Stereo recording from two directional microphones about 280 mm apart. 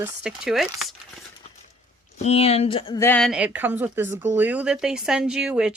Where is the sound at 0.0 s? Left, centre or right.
Centre.